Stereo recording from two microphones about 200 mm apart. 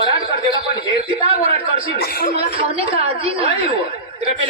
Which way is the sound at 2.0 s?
50° left (ahead or behind).